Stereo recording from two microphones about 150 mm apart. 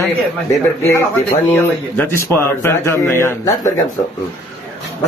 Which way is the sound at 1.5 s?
15° left (ahead or behind).